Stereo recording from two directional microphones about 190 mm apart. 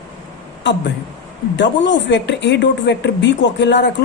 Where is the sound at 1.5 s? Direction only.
70° left (ahead or behind).